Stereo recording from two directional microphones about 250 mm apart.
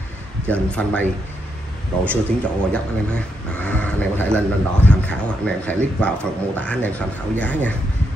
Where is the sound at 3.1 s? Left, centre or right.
Centre.